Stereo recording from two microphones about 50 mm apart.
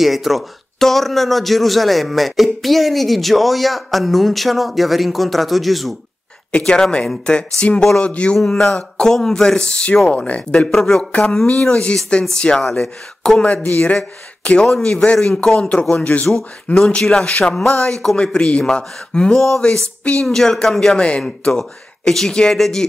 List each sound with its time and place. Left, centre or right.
0.0 s a man's voice: centre
6.6 s speech: centre
10.7 s speech: centre
11.1 s speech: left
13.4 s speech: left
17.0 s speech: centre
21.0 s speech: left
21.5 s speech: centre